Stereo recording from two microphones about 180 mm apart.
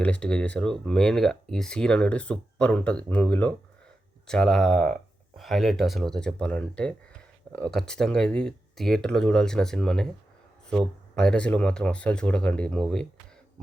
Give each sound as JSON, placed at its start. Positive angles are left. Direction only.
{"t": 0.0, "sound": "speech", "side_deg": 5}
{"t": 11.1, "sound": "speech", "side_deg": 5}